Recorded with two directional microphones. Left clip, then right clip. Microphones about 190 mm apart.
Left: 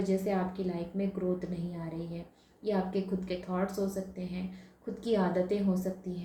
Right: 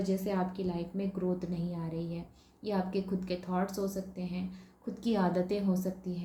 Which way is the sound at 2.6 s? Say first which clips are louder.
Left 2 dB; 55° right (ahead or behind).